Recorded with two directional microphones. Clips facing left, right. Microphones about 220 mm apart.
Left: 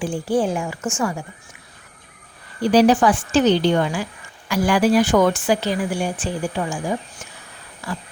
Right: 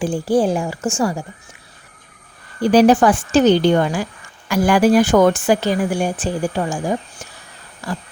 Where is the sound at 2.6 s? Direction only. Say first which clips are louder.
Right 3 dB; 50° right (ahead or behind).